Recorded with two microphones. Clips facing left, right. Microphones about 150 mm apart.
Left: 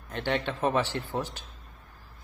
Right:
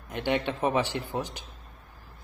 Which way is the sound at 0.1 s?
15° right (ahead or behind).